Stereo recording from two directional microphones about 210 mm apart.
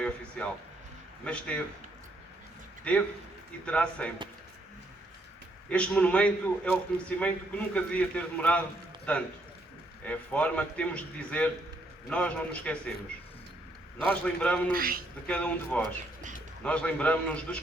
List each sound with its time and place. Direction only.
0.0 s a man's voice: 5° left (ahead or behind)
2.9 s a man's voice: 5° left (ahead or behind)
5.6 s a man's voice: 5° left (ahead or behind)
14.1 s a man's voice: 5° left (ahead or behind)
14.7 s a man's voice: 45° right (ahead or behind)
15.3 s a man's voice: 5° left (ahead or behind)